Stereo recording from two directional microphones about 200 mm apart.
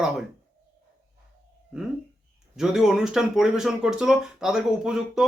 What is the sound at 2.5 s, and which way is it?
A man's voice, centre (ahead or behind).